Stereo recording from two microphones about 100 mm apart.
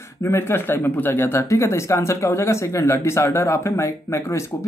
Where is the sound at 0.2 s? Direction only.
25° left (ahead or behind).